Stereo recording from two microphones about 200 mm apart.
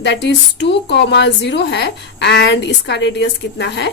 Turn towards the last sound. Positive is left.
turn(degrees=60)  # may be behind; listen again after turning